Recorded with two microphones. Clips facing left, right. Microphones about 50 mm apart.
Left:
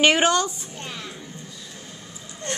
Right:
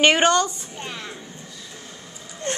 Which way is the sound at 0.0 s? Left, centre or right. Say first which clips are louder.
Right 1 dB; centre.